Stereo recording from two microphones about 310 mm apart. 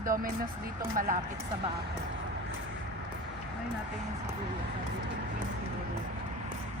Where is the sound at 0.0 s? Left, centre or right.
Right.